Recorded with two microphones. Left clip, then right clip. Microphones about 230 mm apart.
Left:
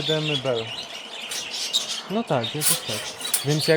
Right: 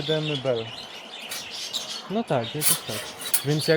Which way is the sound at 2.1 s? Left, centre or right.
Centre.